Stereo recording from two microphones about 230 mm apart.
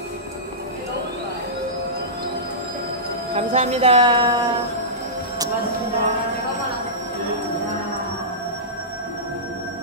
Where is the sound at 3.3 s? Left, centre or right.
Right.